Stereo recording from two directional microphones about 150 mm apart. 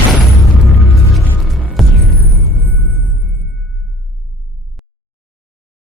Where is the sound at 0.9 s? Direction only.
Centre (ahead or behind).